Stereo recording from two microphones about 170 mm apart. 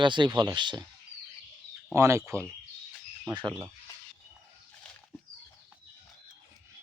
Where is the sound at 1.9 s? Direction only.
15° right (ahead or behind).